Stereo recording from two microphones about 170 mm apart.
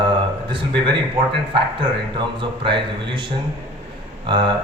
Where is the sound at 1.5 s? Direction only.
30° right (ahead or behind).